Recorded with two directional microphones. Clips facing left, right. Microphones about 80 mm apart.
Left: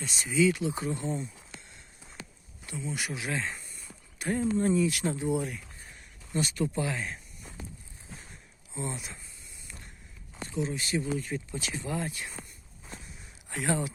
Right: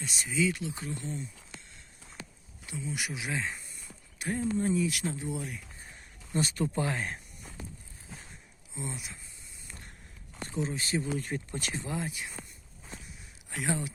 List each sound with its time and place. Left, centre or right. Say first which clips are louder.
0.0 s speech: left 4 dB; centre
2.8 s speech: left 2 dB; centre
6.3 s speech: even; right
8.7 s speech: left 3 dB; centre
10.5 s speech: left 1 dB; right
11.2 s speech: left 1 dB; right
11.7 s speech: left 2 dB; right
11.9 s speech: left 1 dB; centre
13.5 s speech: left 3 dB; centre